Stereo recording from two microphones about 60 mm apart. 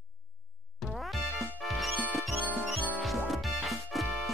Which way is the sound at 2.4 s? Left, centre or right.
Right.